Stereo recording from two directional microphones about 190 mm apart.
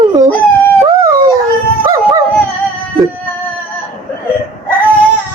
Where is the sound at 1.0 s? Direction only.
15° right (ahead or behind).